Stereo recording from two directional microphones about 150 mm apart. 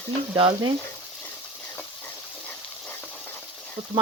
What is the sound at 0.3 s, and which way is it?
Frying, 35° right (ahead or behind).